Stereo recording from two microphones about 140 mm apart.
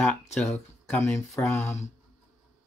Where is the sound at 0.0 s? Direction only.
5° left (ahead or behind).